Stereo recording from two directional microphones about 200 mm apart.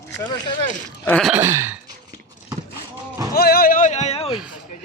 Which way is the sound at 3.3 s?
50° left (ahead or behind).